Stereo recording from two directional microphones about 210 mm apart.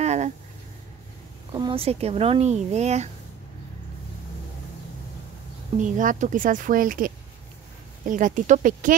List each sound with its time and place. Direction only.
0.0 s a sound: 30° right (ahead or behind)
1.5 s speech: 20° right (ahead or behind)
5.8 s speech: 35° right (ahead or behind)